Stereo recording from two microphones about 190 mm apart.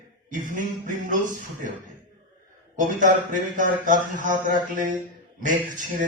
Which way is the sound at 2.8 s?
40° right (ahead or behind).